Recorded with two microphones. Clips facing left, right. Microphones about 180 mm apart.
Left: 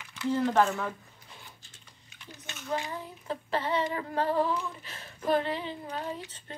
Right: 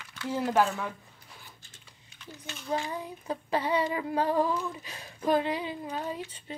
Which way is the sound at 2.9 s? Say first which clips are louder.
Right 2 dB; 15° right (ahead or behind).